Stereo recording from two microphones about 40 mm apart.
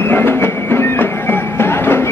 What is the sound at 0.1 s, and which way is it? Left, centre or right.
Music, left.